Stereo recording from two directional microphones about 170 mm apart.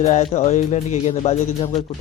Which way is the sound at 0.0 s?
40° left (ahead or behind).